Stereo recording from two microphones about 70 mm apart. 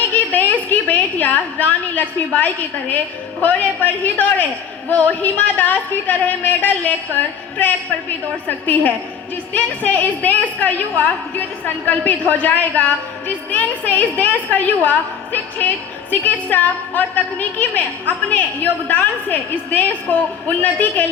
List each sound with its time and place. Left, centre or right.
0.3 s a woman's voice: left